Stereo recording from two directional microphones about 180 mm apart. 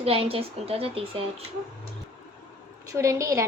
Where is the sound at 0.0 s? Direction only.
30° right (ahead or behind).